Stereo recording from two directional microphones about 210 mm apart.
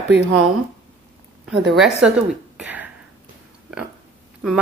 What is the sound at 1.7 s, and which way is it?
Speech, centre (ahead or behind).